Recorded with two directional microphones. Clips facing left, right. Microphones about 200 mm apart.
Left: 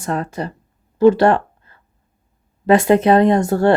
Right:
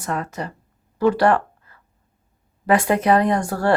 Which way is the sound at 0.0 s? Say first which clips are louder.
Left 4 dB; 30° left (ahead or behind).